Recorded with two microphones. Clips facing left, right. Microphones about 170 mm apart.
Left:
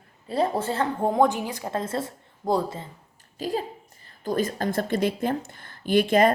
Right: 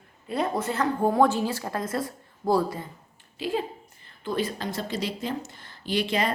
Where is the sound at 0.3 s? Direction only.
30° left (ahead or behind).